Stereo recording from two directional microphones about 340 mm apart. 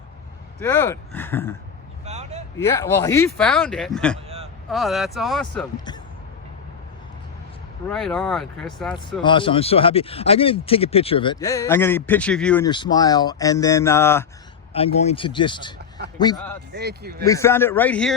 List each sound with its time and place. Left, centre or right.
0.6 s speech: centre
2.0 s vehicle: centre
2.6 s speech: centre
5.7 s speech: centre
7.9 s speech: centre
9.2 s speech: centre
16.7 s speech: right
17.2 s speech: centre